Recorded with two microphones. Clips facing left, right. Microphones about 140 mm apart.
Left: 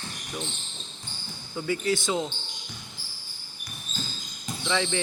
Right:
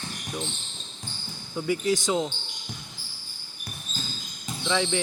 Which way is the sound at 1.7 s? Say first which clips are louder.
Right 2 dB; 15° right (ahead or behind).